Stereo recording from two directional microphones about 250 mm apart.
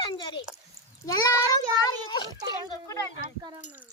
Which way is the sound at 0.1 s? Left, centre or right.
Centre.